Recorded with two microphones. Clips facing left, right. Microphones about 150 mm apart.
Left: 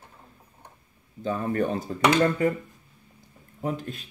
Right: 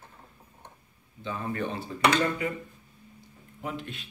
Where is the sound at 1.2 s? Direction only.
45° left (ahead or behind).